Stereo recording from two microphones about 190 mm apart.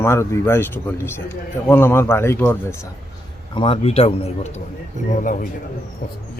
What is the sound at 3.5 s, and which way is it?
A man's voice, 30° left (ahead or behind).